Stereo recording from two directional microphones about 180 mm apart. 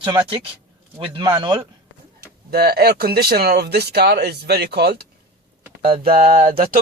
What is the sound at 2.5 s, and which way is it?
Speech, 60° right (ahead or behind).